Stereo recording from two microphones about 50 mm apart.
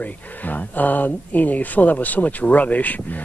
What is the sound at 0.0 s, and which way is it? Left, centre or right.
Speech, left.